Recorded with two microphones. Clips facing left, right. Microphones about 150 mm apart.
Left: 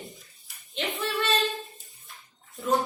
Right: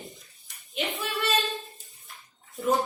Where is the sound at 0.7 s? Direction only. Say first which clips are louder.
Right 1 dB; centre (ahead or behind).